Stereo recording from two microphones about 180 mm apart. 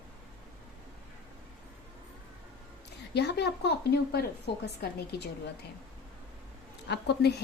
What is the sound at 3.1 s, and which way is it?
Speech, 65° left (ahead or behind).